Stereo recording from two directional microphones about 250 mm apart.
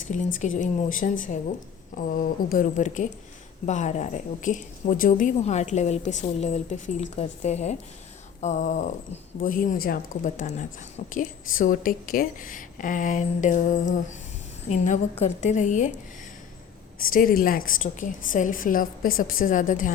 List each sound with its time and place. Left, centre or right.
0.1 s a woman's voice: left
17.1 s speech: left